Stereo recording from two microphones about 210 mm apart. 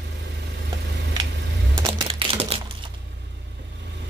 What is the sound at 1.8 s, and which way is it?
Typewriter, 25° right (ahead or behind).